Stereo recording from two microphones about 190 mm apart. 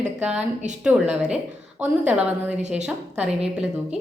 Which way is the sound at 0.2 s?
5° right (ahead or behind).